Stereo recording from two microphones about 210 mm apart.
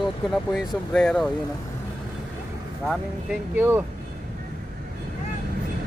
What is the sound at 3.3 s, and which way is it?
Speech, 10° right (ahead or behind).